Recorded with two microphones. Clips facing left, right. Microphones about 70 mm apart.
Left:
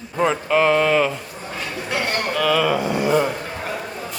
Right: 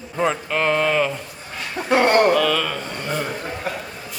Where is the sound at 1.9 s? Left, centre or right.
Right.